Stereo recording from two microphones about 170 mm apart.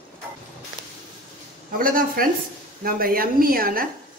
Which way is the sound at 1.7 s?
55° right (ahead or behind).